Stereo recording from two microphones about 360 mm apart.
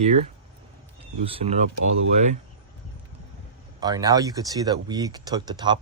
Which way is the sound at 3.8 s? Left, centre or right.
Centre.